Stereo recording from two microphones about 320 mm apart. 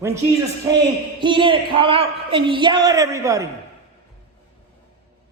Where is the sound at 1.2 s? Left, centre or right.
Centre.